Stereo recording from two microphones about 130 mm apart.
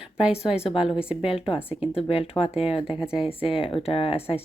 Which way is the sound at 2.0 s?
50° left (ahead or behind).